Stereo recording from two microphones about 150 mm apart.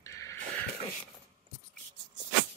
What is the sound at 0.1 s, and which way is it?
Wheeze, 20° left (ahead or behind).